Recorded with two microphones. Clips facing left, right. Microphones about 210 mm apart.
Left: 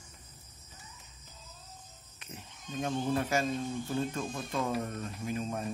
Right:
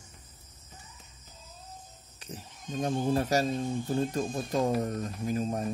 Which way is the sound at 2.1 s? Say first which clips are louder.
Right 5 dB; 35° right (ahead or behind).